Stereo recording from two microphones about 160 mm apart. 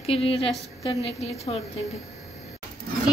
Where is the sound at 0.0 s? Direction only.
35° left (ahead or behind).